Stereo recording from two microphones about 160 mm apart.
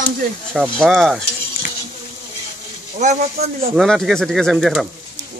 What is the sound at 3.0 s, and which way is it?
Speech, 45° right (ahead or behind).